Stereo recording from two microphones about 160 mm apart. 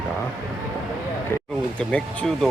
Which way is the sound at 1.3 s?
15° left (ahead or behind).